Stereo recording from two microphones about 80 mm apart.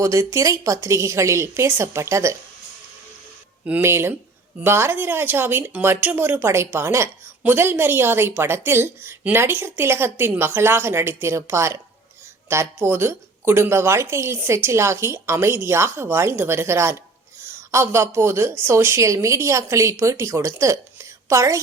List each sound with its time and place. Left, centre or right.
0.0 s a woman's voice: right
3.6 s speech: right
3.8 s a woman's voice: right